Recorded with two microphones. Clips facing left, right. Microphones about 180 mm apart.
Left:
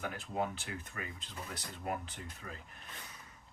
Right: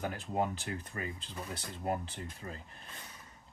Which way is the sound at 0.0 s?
35° right (ahead or behind).